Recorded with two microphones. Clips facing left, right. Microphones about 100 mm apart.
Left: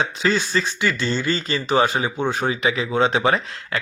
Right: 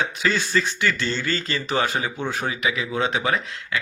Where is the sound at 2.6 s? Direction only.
30° left (ahead or behind).